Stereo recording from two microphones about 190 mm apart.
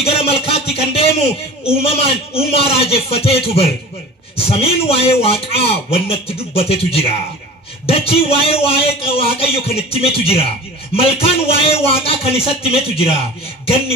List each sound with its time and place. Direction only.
0.0 s a man's voice: 30° left (ahead or behind)